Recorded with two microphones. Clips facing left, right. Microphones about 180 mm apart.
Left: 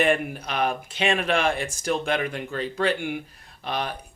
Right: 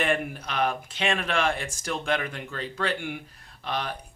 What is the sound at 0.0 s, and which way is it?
Speech, 15° left (ahead or behind).